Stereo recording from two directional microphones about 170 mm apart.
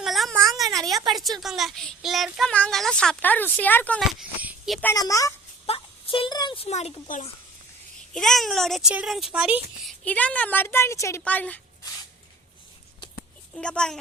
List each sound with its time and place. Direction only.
0.0 s a sound: centre (ahead or behind)
0.9 s speech: centre (ahead or behind)
4.2 s speech: 5° right (ahead or behind)
4.8 s a woman's voice: 15° left (ahead or behind)
5.6 s speech: 35° left (ahead or behind)
8.1 s speech: centre (ahead or behind)
10.0 s speech: 10° left (ahead or behind)
13.6 s speech: 5° left (ahead or behind)